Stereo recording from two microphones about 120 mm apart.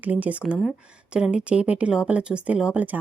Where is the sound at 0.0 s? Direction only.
15° right (ahead or behind).